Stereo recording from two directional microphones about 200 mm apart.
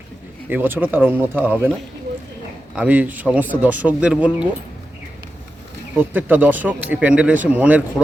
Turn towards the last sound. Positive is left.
turn(degrees=-5)  # may be behind; listen again after turning